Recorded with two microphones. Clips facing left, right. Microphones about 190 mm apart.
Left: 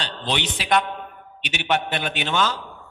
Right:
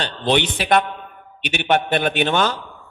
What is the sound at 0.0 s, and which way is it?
Speech, 55° right (ahead or behind).